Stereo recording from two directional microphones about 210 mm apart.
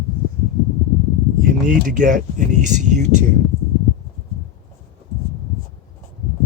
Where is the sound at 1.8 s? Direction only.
40° right (ahead or behind).